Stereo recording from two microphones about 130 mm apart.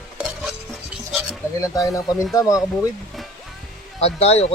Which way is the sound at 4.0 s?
50° left (ahead or behind).